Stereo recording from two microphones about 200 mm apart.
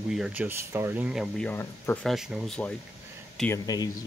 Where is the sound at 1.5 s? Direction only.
10° left (ahead or behind).